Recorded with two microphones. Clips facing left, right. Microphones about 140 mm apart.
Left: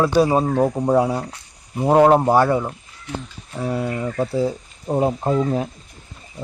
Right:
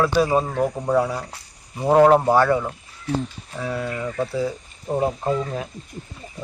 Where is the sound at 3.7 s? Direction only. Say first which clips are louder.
Left 2 dB; 20° left (ahead or behind).